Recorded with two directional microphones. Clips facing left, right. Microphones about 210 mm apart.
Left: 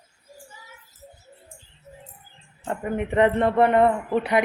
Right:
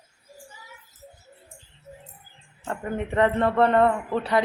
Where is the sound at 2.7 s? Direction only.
15° left (ahead or behind).